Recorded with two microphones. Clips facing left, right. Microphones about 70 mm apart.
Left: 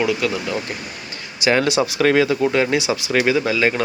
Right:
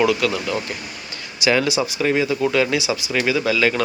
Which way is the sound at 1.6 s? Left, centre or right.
Left.